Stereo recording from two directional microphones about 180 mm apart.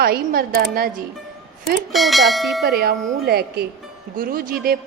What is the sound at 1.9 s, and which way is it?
Speech, centre (ahead or behind).